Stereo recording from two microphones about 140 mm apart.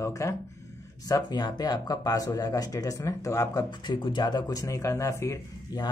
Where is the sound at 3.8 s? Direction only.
35° left (ahead or behind).